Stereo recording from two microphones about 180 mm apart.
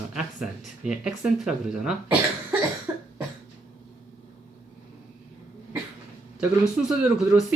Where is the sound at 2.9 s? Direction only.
15° right (ahead or behind).